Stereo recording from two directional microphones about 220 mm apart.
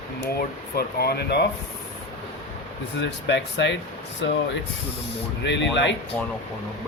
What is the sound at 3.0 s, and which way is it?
Speech, 55° left (ahead or behind).